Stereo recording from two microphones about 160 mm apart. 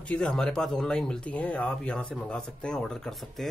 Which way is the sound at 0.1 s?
5° left (ahead or behind).